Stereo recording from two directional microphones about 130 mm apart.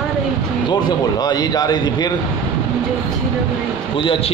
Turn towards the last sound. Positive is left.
turn(degrees=40)  # may be behind; listen again after turning